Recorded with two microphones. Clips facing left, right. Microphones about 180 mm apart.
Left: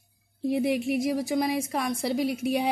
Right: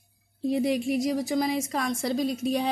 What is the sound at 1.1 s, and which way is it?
Speech, 5° left (ahead or behind).